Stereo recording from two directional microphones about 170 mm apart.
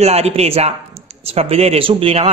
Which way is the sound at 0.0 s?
40° right (ahead or behind).